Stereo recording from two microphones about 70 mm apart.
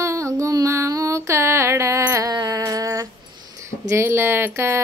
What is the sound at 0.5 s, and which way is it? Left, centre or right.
Music, right.